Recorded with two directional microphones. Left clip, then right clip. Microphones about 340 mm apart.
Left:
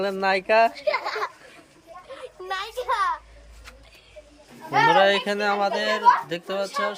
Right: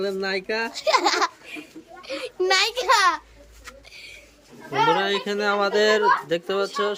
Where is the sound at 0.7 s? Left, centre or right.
Right.